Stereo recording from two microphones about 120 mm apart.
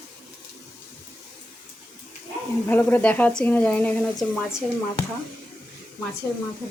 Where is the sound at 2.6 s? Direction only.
15° left (ahead or behind).